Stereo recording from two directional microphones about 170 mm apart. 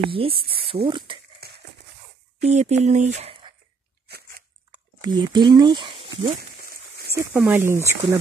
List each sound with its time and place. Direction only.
0.0 s speech: 30° right (ahead or behind)
1.4 s a sound: 65° right (ahead or behind)
2.4 s speech: 40° right (ahead or behind)
5.0 s speech: 25° right (ahead or behind)
7.2 s speech: 10° right (ahead or behind)